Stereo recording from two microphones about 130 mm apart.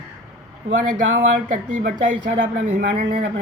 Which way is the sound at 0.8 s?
90° right.